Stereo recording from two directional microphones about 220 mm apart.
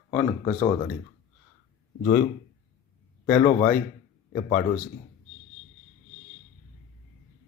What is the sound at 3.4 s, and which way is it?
Speech, 35° left (ahead or behind).